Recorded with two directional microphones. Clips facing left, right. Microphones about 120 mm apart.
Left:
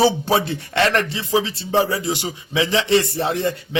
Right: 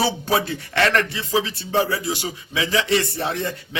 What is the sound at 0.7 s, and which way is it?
A man's voice, 20° left (ahead or behind).